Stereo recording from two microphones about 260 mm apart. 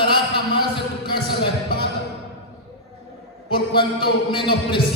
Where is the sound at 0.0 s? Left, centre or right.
Centre.